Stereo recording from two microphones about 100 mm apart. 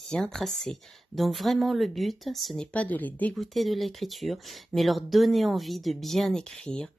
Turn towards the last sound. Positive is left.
turn(degrees=10)  # may be behind; listen again after turning